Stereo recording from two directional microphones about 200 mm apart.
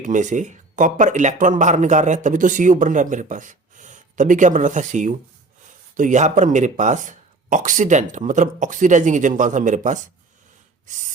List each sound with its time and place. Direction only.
0.0 s speech: 40° right (ahead or behind)